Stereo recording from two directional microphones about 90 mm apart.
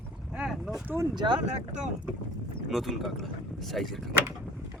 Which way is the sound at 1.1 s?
60° right (ahead or behind).